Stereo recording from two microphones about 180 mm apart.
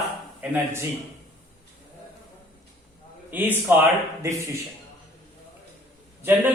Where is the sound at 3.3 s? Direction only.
10° right (ahead or behind).